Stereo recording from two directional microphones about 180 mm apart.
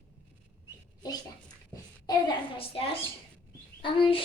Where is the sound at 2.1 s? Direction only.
25° left (ahead or behind).